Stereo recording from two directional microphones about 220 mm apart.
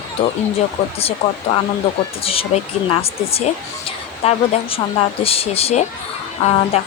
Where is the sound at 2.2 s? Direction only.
25° left (ahead or behind).